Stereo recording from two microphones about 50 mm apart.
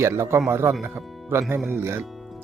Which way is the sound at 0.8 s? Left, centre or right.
Right.